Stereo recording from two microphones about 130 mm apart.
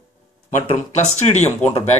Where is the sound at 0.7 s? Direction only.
60° left (ahead or behind).